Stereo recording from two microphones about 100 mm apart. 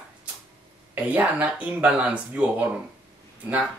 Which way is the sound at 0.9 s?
15° right (ahead or behind).